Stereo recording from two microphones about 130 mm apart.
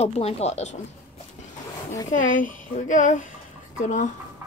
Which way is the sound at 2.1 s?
90° left.